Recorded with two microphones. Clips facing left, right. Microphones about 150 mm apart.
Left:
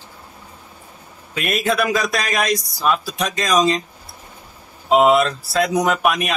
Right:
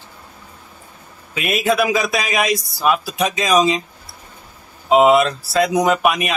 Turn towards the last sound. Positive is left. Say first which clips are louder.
# right 2 dB
turn(degrees=0)  # may be behind; listen again after turning